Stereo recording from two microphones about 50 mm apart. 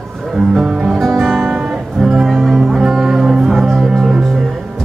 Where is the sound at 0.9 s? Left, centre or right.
Centre.